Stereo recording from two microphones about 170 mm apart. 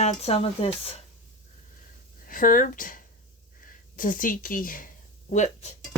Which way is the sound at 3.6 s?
55° left (ahead or behind).